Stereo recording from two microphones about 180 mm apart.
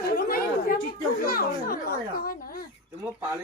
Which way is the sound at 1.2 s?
55° left (ahead or behind).